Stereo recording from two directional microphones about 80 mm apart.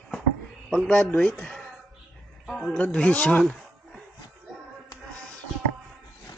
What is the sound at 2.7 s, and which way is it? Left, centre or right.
Speech, centre.